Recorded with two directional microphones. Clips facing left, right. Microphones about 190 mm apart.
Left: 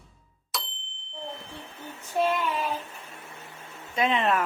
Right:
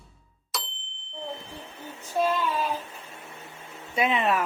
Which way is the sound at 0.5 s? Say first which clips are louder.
Even; centre (ahead or behind).